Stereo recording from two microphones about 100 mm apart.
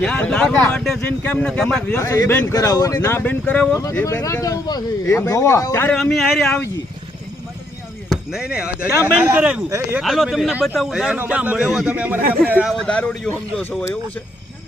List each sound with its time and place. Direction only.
0.0 s speech: 5° left (ahead or behind)
1.9 s speech: 30° left (ahead or behind)
4.0 s speech: 30° left (ahead or behind)
6.0 s speech: centre (ahead or behind)
8.1 s a man's voice: 5° right (ahead or behind)
9.6 s speech: 30° right (ahead or behind)
10.0 s a man's voice: centre (ahead or behind)
12.8 s speech: 10° left (ahead or behind)